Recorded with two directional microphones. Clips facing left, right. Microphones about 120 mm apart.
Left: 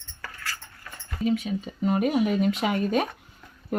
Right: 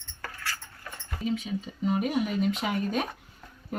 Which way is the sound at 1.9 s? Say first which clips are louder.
Left 4 dB; 60° left (ahead or behind).